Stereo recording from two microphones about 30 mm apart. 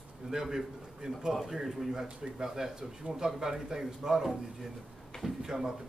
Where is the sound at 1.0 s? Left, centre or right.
Right.